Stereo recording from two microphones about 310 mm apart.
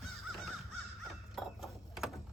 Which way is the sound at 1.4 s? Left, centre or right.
Centre.